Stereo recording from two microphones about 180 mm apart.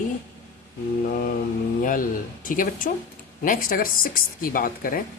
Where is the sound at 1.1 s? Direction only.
55° left (ahead or behind).